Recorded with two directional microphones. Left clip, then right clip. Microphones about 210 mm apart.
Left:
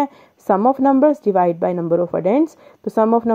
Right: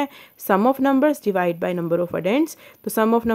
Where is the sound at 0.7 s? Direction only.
25° right (ahead or behind).